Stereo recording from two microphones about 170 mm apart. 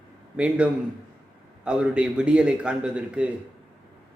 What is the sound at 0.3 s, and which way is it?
A man's voice, 5° right (ahead or behind).